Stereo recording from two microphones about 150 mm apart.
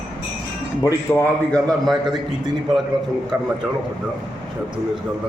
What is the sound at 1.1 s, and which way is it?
A man's voice, 5° left (ahead or behind).